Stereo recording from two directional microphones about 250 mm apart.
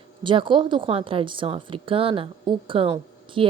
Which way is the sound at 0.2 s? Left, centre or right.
Centre.